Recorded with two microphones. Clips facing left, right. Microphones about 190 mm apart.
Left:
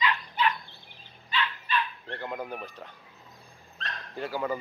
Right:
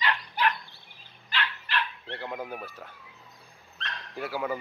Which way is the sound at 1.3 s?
80° right.